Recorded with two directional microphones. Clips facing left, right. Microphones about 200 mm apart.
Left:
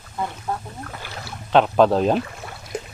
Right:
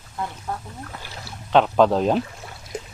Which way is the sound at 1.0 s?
65° left (ahead or behind).